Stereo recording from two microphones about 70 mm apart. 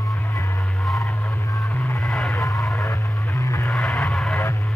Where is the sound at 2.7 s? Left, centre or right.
Left.